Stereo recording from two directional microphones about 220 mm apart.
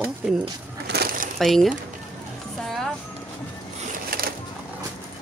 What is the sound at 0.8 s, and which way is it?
Crushing, 45° right (ahead or behind).